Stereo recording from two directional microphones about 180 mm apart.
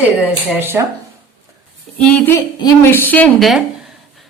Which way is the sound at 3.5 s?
Centre (ahead or behind).